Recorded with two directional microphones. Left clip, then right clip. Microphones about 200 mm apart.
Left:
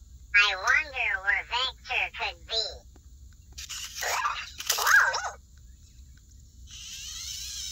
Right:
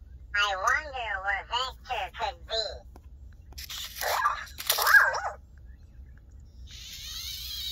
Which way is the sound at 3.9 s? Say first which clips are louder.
Right 2 dB; 35° left (ahead or behind).